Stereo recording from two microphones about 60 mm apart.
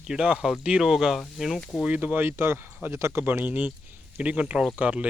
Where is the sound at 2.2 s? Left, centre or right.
Right.